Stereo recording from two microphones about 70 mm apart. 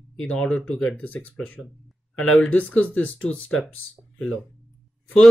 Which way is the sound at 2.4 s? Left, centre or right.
Centre.